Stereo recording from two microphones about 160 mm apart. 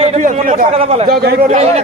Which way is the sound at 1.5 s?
45° right (ahead or behind).